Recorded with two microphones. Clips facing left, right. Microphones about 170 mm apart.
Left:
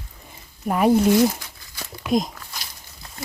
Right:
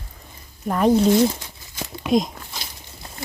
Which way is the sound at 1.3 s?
20° right (ahead or behind).